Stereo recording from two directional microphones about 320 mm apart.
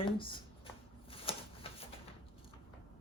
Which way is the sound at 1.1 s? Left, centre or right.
Centre.